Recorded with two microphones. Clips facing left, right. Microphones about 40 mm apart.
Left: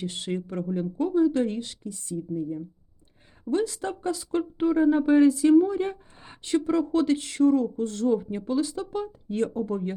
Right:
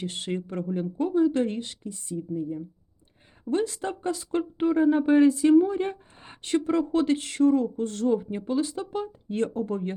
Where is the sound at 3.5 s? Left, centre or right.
Right.